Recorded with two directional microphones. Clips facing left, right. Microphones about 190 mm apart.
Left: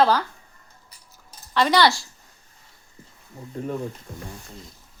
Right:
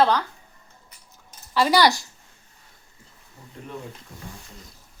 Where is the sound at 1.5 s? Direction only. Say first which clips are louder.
Even; 5° right (ahead or behind).